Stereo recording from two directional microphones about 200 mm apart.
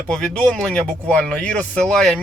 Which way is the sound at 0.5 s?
5° left (ahead or behind).